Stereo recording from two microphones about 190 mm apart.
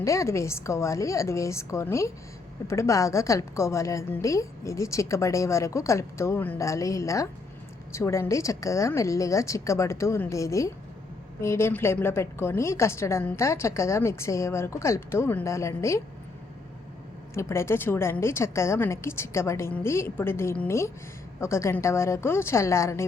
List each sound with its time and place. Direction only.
0.0 s a woman's voice: 15° left (ahead or behind)
17.3 s a woman's voice: 15° left (ahead or behind)